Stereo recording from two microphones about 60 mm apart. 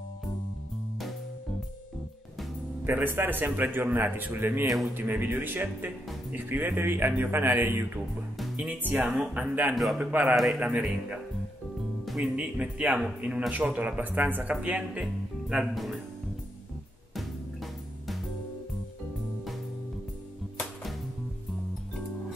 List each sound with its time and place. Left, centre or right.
2.8 s speech: right
8.6 s speech: right
10.3 s a man's voice: centre
10.6 s speech: right
12.4 s speech: right
15.4 s speech: centre